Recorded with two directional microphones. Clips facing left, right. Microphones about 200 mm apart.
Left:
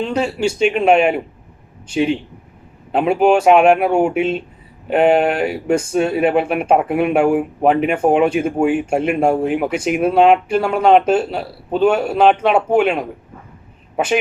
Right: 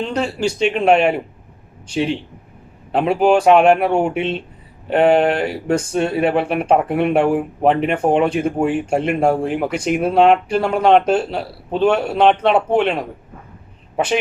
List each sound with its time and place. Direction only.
0.0 s a man's voice: 5° left (ahead or behind)